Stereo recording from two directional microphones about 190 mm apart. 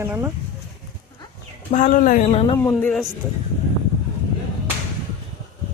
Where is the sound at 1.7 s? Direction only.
40° left (ahead or behind).